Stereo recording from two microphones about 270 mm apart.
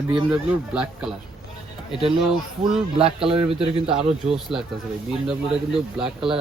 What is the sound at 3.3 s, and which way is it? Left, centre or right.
Speech, right.